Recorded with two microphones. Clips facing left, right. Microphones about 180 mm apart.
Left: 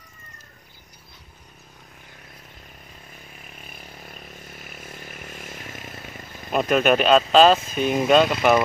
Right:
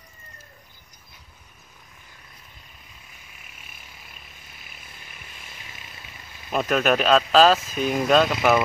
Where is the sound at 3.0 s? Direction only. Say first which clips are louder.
Left 7 dB; 40° left (ahead or behind).